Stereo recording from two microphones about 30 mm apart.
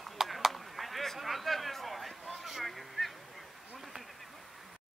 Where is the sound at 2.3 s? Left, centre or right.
Centre.